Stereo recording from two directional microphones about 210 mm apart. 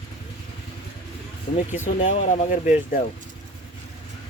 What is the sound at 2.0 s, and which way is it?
Speech, 30° left (ahead or behind).